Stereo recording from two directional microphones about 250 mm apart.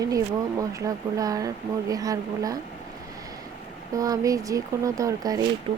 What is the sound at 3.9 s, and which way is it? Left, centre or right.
Speech, centre.